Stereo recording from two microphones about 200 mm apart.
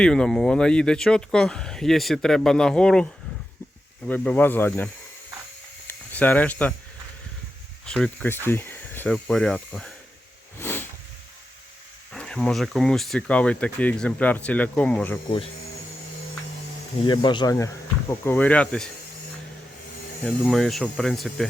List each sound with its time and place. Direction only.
0.0 s speech: 5° left (ahead or behind)
5.9 s speech: 10° left (ahead or behind)
7.9 s speech: 5° left (ahead or behind)
10.6 s a sound: 10° left (ahead or behind)
12.1 s speech: 5° left (ahead or behind)
17.0 s speech: 25° left (ahead or behind); by 18.9 s 5° left (ahead or behind)
20.2 s speech: centre (ahead or behind)